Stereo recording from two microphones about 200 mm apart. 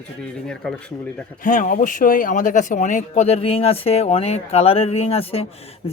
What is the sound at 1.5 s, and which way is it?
Speech, 40° left (ahead or behind).